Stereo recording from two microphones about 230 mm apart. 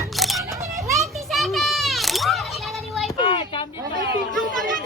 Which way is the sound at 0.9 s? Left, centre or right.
Centre.